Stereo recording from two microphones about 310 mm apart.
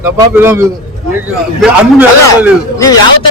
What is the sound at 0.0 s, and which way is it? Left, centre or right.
Speech, centre.